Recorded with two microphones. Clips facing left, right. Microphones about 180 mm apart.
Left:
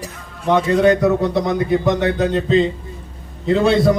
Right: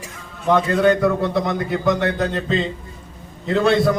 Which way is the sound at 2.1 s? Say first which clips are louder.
Left 5 dB; centre (ahead or behind).